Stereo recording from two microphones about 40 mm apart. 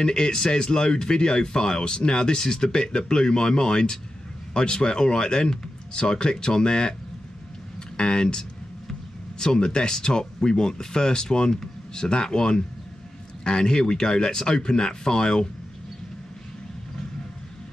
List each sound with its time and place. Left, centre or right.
0.0 s speech: centre
8.0 s speech: centre